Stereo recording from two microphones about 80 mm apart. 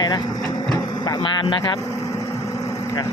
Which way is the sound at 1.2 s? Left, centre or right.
Left.